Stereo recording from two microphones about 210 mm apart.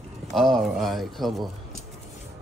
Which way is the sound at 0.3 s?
Centre (ahead or behind).